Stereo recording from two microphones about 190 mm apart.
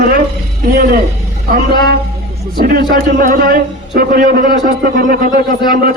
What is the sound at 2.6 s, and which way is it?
A man's voice, 50° right (ahead or behind).